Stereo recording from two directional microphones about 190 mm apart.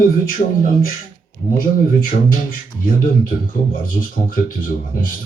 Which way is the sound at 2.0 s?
45° left (ahead or behind).